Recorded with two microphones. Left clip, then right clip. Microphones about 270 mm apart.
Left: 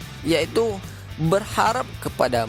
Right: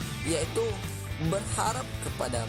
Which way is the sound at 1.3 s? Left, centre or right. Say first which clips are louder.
Left 10 dB; left.